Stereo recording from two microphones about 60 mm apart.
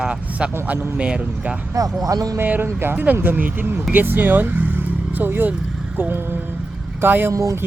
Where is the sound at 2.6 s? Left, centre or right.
Right.